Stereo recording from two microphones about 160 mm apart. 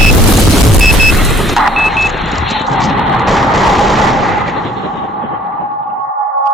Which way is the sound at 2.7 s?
Centre (ahead or behind).